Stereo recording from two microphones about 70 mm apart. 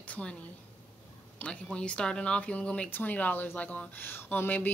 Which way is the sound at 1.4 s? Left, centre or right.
Centre.